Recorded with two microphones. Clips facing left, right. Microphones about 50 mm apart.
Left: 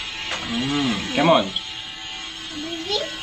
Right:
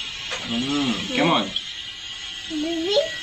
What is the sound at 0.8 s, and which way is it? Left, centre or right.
Speech, left.